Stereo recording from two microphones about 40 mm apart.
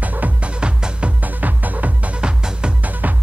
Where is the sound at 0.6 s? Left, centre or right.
Right.